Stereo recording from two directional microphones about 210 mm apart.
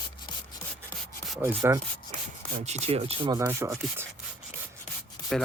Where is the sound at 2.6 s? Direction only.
30° right (ahead or behind); by 3.7 s 15° right (ahead or behind).